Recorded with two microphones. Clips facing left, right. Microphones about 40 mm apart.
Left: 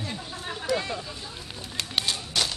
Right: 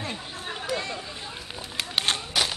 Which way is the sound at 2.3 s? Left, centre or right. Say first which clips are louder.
Right 1 dB; centre.